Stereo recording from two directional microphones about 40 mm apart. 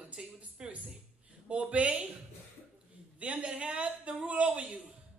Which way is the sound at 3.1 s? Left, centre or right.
Right.